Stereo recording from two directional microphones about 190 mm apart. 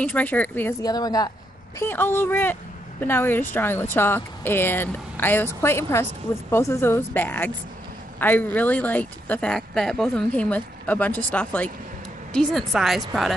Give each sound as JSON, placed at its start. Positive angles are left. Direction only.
{"t": 0.0, "sound": "a woman's voice", "side_deg": 10}